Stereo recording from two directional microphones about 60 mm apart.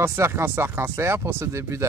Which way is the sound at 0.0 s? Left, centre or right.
Right.